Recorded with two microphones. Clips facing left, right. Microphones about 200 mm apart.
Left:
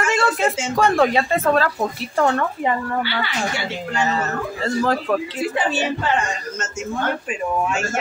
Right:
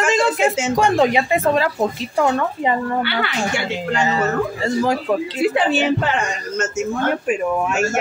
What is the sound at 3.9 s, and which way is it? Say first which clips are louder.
Speech: right 4 dB; 15° right (ahead or behind).